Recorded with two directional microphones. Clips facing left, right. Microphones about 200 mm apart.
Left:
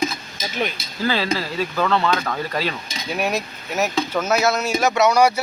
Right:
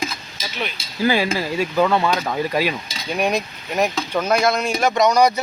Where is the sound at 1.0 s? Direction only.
15° right (ahead or behind).